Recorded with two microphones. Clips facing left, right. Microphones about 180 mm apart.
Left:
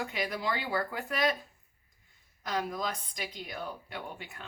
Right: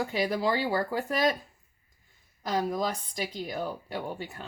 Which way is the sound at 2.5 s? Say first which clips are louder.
Right 5 dB; 35° right (ahead or behind).